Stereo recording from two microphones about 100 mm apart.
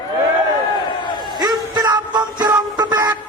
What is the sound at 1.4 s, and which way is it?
Music, 40° right (ahead or behind).